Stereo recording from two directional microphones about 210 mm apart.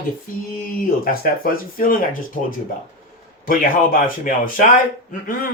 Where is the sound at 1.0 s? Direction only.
45° left (ahead or behind).